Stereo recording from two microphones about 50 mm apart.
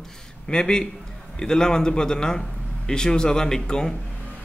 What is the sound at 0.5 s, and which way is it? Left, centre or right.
A man's voice, centre.